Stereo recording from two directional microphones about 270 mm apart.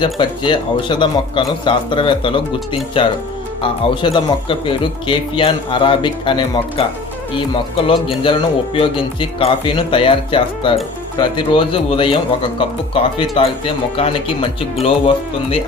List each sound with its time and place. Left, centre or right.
0.0 s speech: centre
7.9 s speech: centre